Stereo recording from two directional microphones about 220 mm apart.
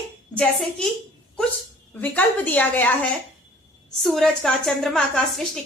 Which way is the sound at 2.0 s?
5° left (ahead or behind).